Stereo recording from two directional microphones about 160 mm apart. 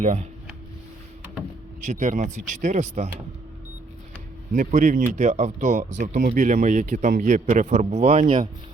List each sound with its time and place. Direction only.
0.0 s a man's voice: 45° right (ahead or behind)
1.8 s a man's voice: 50° right (ahead or behind)
4.5 s a man's voice: 55° right (ahead or behind)